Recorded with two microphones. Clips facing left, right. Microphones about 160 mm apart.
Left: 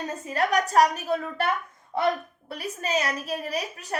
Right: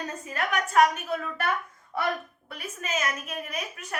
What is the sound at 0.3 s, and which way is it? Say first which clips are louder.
A woman's voice: left 6 dB; 35° left (ahead or behind).